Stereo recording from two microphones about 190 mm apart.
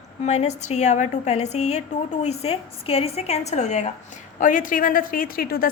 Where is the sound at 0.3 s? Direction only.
35° left (ahead or behind).